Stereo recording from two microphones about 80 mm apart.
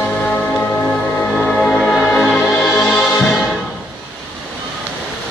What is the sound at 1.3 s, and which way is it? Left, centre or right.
Music, centre.